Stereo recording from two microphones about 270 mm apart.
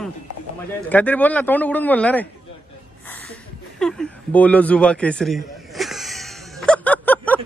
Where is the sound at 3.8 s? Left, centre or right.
Centre.